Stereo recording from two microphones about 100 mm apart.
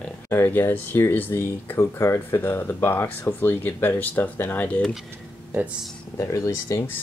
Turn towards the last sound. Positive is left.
turn(degrees=30)  # may be behind; listen again after turning